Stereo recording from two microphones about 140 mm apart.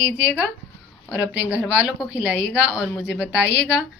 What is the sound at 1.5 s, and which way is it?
A woman's voice, 5° right (ahead or behind).